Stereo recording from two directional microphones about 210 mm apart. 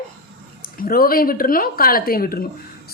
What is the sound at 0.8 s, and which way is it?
A woman's voice, 45° left (ahead or behind).